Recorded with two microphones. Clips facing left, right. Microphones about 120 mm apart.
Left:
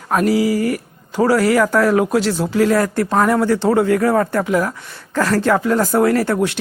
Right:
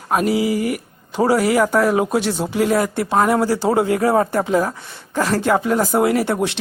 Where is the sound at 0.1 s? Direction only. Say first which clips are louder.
Left 2 dB; 20° right (ahead or behind).